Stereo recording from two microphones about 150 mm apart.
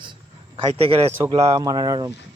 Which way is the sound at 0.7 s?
40° right (ahead or behind).